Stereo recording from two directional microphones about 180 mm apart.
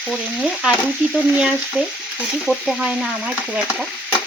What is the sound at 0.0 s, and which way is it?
Stir, 5° right (ahead or behind).